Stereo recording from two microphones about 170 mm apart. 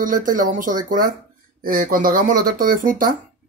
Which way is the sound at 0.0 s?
50° right (ahead or behind).